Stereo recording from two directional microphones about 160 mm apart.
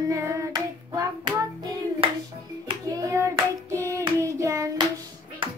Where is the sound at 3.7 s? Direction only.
20° right (ahead or behind).